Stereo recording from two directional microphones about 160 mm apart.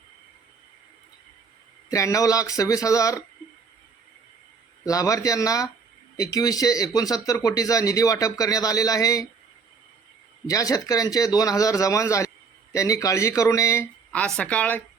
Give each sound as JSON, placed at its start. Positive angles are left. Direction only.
{"t": 1.9, "sound": "speech", "side_deg": 20}
{"t": 4.9, "sound": "speech", "side_deg": 20}
{"t": 10.4, "sound": "speech", "side_deg": 20}
{"t": 14.1, "sound": "speech", "side_deg": 5}